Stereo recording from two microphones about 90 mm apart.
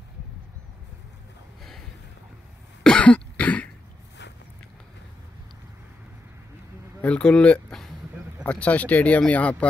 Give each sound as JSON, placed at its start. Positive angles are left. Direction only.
{"t": 2.8, "sound": "cough", "side_deg": 10}
{"t": 7.0, "sound": "a sound", "side_deg": 10}
{"t": 8.5, "sound": "speech", "side_deg": 15}